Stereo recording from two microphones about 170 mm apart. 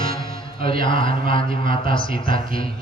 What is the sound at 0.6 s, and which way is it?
A man's voice, 30° left (ahead or behind).